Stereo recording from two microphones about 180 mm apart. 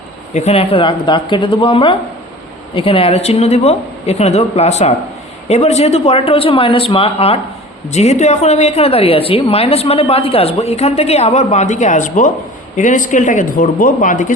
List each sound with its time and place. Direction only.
0.3 s a woman's voice: 35° left (ahead or behind)